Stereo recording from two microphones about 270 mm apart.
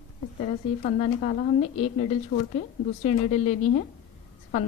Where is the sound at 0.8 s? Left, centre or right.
Left.